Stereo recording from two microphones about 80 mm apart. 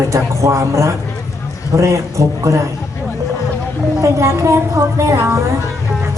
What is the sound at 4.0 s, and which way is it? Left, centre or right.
A woman's voice, right.